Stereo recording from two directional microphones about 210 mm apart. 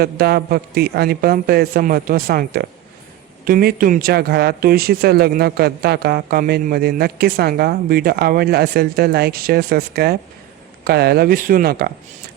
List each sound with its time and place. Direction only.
0.0 s speech: 45° right (ahead or behind)